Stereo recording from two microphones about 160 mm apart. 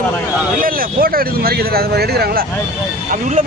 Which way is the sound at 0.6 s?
60° right (ahead or behind).